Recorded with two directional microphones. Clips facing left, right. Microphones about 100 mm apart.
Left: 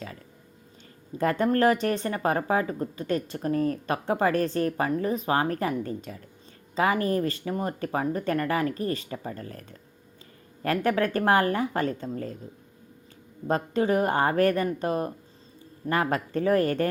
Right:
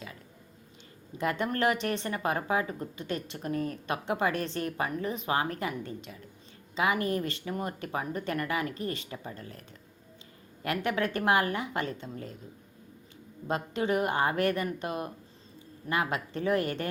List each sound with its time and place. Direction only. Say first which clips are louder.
1.2 s speech: left 6 dB; 40° left (ahead or behind)
13.5 s a woman's voice: left 5 dB; 40° left (ahead or behind)